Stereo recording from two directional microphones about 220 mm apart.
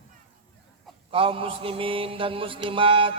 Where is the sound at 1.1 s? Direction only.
25° right (ahead or behind).